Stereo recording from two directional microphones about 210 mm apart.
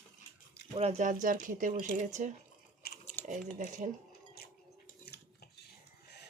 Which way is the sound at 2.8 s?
45° left (ahead or behind).